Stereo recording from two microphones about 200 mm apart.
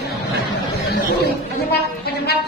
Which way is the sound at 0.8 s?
55° left (ahead or behind).